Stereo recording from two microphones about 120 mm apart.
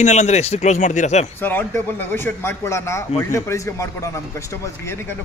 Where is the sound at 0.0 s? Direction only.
75° left (ahead or behind).